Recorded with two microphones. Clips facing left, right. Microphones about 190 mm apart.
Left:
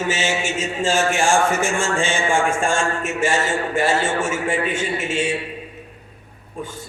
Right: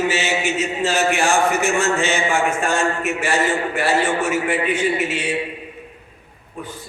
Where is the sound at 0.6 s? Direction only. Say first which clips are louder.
Even; 25° left (ahead or behind).